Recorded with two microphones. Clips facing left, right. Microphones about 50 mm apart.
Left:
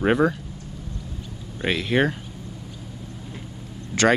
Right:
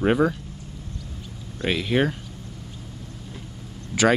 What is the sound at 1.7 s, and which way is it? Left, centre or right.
Speech, centre.